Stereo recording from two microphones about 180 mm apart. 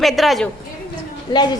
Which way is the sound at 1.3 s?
25° left (ahead or behind).